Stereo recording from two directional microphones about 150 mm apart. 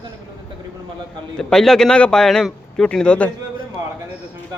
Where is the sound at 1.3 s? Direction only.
5° left (ahead or behind).